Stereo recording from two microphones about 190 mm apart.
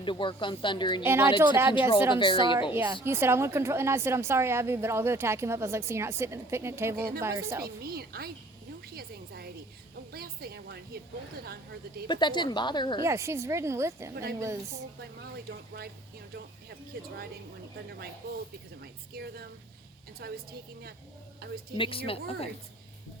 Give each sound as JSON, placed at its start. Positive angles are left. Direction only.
{"t": 0.0, "sound": "speech", "side_deg": 25}
{"t": 1.0, "sound": "a woman's voice", "side_deg": -10}
{"t": 2.1, "sound": "speech", "side_deg": 25}
{"t": 2.7, "sound": "a woman's voice", "side_deg": -15}
{"t": 7.6, "sound": "a woman's voice", "side_deg": -55}
{"t": 9.0, "sound": "music", "side_deg": -55}
{"t": 12.0, "sound": "speech", "side_deg": 25}
{"t": 13.1, "sound": "a woman's voice", "side_deg": -15}
{"t": 15.4, "sound": "speech", "side_deg": -55}
{"t": 16.9, "sound": "speech", "side_deg": -55}
{"t": 18.8, "sound": "a sound", "side_deg": -55}
{"t": 20.2, "sound": "speech", "side_deg": -55}
{"t": 21.8, "sound": "speech", "side_deg": 30}